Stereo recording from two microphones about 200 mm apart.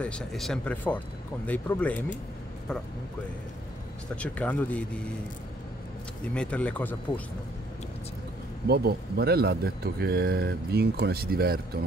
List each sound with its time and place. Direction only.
0.0 s speech: 5° left (ahead or behind)
4.1 s speech: 5° left (ahead or behind)
6.2 s speech: 5° left (ahead or behind)
8.6 s a man's voice: 50° right (ahead or behind)